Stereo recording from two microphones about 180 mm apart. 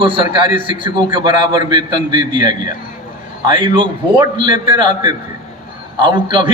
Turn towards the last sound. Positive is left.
turn(degrees=-25)  # may be behind; listen again after turning